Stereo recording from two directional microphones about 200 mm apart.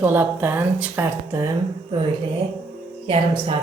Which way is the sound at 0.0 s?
10° right (ahead or behind).